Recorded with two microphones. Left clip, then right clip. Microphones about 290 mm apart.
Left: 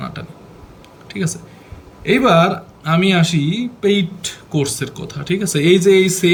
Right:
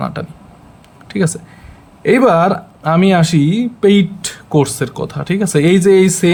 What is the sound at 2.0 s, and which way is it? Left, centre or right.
Speech, centre.